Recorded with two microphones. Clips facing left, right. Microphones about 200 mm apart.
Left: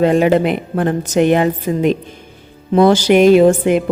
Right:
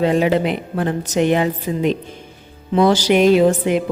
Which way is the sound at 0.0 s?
50° left (ahead or behind).